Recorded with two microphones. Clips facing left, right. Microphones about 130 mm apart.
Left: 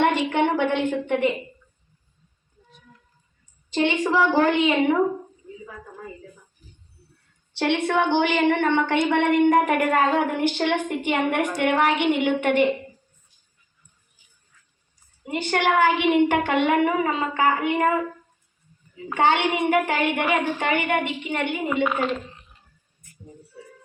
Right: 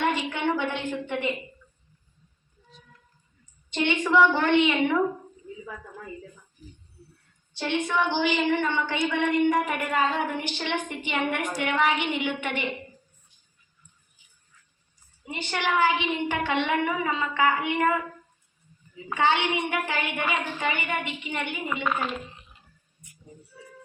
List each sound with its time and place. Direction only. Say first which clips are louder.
0.0 s a woman's voice: left 6 dB; 60° left (ahead or behind)
3.7 s a woman's voice: left 3 dB; 35° left (ahead or behind)
7.5 s a woman's voice: left 5 dB; 70° left (ahead or behind); by 12.6 s 50° left (ahead or behind)
15.2 s a woman's voice: left 7 dB; 50° left (ahead or behind)
19.1 s a woman's voice: left 3 dB; 55° left (ahead or behind)